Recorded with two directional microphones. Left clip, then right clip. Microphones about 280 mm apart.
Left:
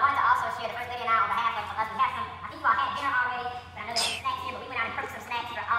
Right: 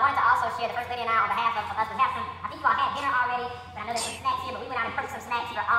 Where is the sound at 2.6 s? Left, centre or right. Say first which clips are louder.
Right 1 dB; centre.